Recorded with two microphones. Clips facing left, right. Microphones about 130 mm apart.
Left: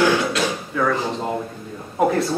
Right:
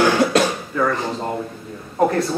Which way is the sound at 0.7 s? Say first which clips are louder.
Even; centre (ahead or behind).